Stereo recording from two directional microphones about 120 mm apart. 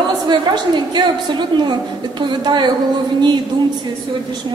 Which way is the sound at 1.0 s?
35° right (ahead or behind).